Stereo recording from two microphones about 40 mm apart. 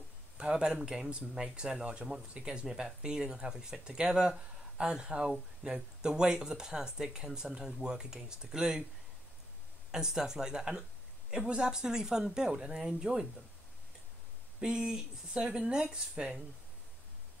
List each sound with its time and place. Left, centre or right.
0.4 s speech: right
9.8 s speech: centre
14.6 s speech: centre